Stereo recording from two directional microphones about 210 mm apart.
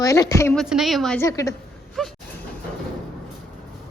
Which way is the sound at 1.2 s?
15° left (ahead or behind).